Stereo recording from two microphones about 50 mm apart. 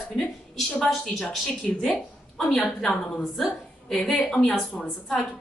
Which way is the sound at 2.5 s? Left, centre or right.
Centre.